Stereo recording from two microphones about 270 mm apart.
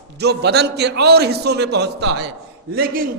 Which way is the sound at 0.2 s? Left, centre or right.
Right.